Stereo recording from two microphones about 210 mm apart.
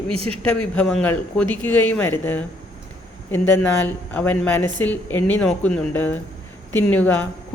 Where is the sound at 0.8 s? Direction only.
5° left (ahead or behind).